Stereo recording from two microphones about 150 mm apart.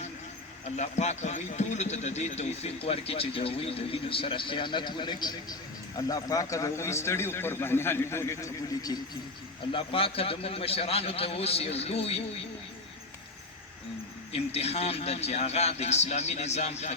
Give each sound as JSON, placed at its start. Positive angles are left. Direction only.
{"t": 0.8, "sound": "a man's voice", "side_deg": 50}
{"t": 9.7, "sound": "a man's voice", "side_deg": 40}
{"t": 14.3, "sound": "a man's voice", "side_deg": 45}